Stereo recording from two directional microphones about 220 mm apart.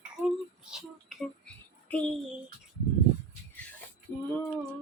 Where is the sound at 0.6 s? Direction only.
Centre (ahead or behind).